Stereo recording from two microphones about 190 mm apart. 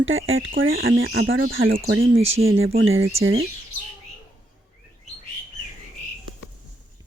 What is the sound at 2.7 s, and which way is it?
Speech, 90° right.